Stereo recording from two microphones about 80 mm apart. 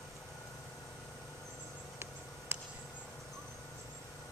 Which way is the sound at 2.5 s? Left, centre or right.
Right.